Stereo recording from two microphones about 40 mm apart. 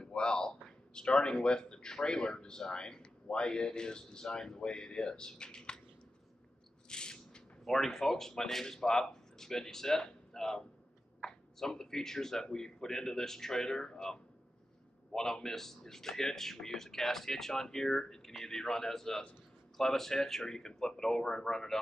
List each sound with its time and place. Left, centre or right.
0.0 s a man's voice: left
6.9 s a sound: centre
7.6 s speech: centre